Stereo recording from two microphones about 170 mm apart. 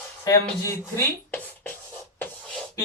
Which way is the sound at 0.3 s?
15° left (ahead or behind).